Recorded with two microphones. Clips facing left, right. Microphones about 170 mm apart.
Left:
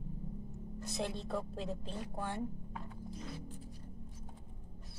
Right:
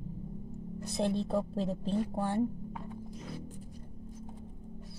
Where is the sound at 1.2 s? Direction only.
30° right (ahead or behind).